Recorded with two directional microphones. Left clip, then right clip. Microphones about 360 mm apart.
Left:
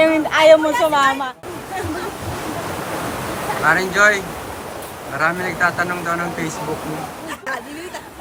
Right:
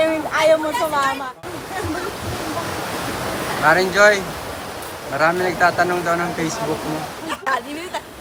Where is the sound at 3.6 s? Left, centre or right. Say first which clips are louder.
Right 1 dB; centre.